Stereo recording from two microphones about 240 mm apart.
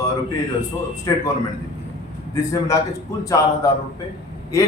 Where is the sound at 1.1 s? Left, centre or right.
Centre.